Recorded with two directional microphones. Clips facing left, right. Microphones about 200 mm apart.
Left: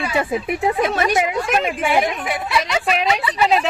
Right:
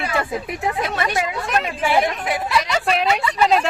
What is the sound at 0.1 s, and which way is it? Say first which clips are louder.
Speech: left 3 dB; 20° left (ahead or behind).